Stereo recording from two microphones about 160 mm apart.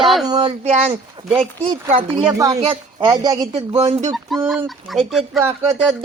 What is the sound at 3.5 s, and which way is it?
Speech, 40° right (ahead or behind).